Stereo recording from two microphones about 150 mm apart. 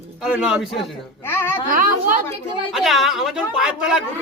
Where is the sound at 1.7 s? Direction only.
65° right (ahead or behind).